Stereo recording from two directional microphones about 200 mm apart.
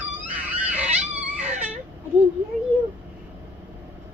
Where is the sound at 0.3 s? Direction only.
5° right (ahead or behind).